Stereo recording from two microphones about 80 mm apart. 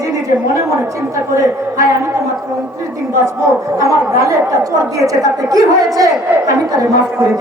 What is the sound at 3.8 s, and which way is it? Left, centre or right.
A woman's voice, right.